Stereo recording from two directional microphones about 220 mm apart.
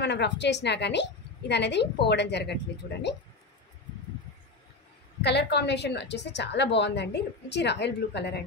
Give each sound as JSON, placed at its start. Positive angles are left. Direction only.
{"t": 0.0, "sound": "a woman's voice", "side_deg": 50}
{"t": 5.2, "sound": "a woman's voice", "side_deg": 50}